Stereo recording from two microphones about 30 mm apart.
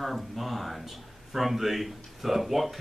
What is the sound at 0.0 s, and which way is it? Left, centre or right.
Speech, centre.